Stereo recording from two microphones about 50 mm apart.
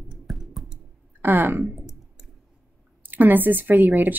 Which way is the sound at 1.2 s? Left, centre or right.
Right.